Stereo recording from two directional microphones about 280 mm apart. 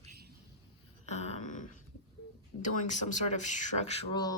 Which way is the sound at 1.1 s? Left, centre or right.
Left.